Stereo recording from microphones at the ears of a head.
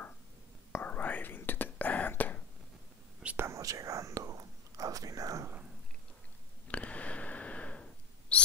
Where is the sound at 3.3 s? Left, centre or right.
Right.